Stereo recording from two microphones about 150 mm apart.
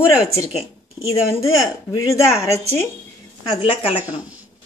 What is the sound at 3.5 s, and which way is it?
Speech, 35° left (ahead or behind).